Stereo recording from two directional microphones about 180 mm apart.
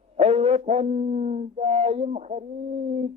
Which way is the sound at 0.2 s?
35° right (ahead or behind).